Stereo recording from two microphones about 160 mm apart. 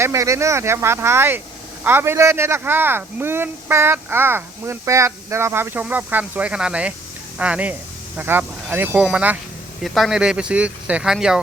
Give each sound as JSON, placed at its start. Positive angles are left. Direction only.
{"t": 0.0, "sound": "speech", "side_deg": -20}